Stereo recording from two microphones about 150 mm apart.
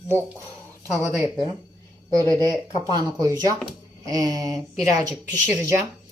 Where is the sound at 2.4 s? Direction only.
20° left (ahead or behind).